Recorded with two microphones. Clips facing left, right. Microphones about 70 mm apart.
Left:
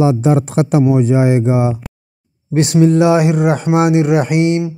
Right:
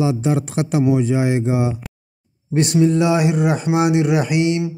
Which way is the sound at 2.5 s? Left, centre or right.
Left.